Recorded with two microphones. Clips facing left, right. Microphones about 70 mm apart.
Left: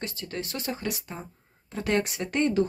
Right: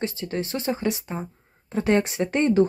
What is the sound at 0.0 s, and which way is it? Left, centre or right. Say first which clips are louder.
Speech: right 7 dB; right.